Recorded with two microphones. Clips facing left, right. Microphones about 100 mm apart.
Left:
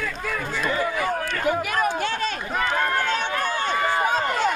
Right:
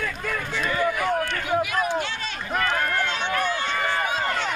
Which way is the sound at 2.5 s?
15° left (ahead or behind).